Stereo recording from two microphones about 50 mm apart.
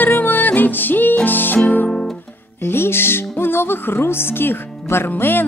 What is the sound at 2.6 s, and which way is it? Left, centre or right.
Music, left.